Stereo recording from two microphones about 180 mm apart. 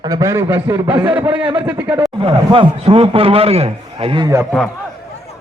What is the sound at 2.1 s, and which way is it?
A man's voice, 25° right (ahead or behind).